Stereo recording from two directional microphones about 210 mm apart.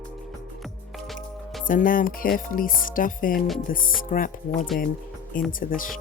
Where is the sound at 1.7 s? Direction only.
40° left (ahead or behind).